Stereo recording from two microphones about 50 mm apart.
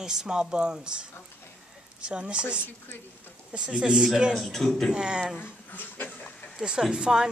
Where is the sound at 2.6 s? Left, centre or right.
Left.